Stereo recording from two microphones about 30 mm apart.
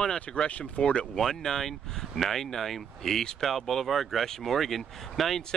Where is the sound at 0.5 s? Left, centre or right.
Left.